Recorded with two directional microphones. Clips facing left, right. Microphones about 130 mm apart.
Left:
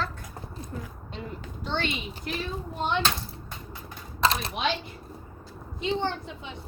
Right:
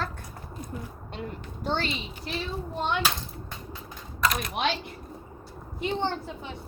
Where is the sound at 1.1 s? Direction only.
50° right (ahead or behind).